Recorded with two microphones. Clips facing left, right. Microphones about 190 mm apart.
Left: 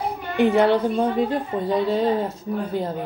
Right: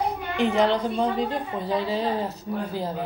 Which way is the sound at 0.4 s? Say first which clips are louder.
Left 4 dB; 55° left (ahead or behind).